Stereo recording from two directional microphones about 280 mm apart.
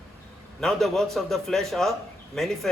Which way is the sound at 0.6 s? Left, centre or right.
Centre.